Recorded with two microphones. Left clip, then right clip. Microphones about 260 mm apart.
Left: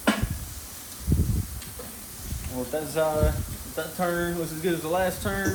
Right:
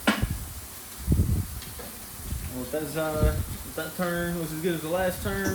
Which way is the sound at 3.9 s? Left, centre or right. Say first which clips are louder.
Left 3 dB; centre.